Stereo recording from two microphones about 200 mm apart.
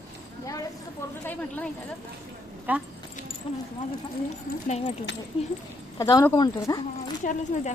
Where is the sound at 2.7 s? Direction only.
10° right (ahead or behind).